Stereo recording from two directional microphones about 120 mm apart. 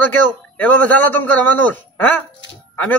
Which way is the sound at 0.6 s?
15° left (ahead or behind).